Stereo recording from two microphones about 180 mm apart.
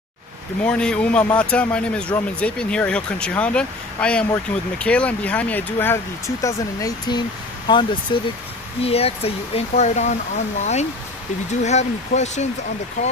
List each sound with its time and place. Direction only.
0.7 s speech: 5° left (ahead or behind); by 12.4 s 40° left (ahead or behind)